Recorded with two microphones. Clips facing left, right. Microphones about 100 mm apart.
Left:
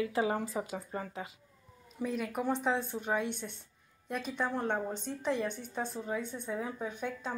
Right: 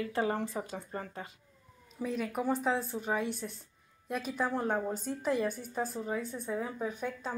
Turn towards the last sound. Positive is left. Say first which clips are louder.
# right 1 dB
turn(degrees=0)  # may be behind; listen again after turning